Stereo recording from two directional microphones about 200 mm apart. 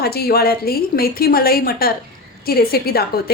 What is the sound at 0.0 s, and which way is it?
A woman's voice, 50° left (ahead or behind).